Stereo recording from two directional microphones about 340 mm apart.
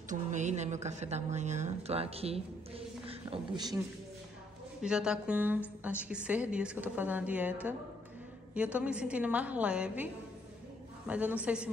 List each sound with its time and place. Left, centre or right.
0.1 s a woman's voice: right
4.8 s a woman's voice: centre
11.1 s a woman's voice: centre